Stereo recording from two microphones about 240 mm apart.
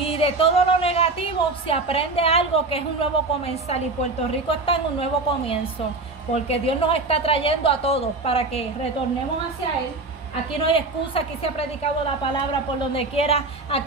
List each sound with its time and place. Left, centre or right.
0.0 s a woman's voice: left
10.7 s a woman's voice: left
12.9 s a woman's voice: left